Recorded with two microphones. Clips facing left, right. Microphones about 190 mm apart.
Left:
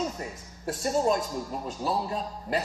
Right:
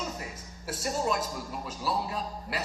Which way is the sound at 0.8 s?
35° left (ahead or behind).